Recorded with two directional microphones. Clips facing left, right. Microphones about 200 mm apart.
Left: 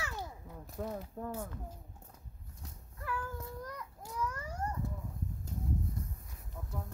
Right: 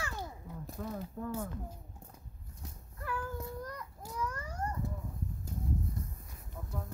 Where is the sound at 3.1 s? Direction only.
5° right (ahead or behind).